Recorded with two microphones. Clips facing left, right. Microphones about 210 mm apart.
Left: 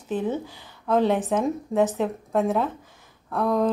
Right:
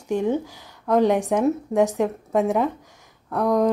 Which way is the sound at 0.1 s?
15° right (ahead or behind).